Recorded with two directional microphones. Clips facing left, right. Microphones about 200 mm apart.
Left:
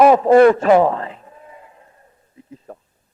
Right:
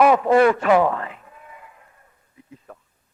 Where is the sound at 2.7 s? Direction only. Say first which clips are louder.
Left 6 dB; 30° left (ahead or behind).